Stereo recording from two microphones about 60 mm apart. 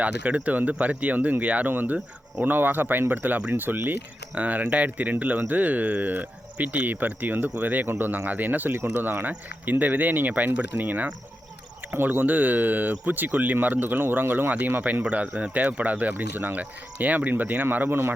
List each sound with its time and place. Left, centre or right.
0.0 s speech: right
15.0 s speech: right